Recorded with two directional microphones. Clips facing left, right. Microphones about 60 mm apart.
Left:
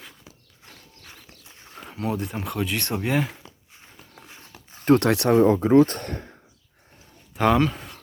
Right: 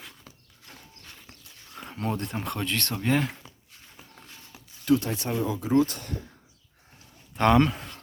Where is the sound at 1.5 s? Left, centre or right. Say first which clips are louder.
Left 3 dB; left.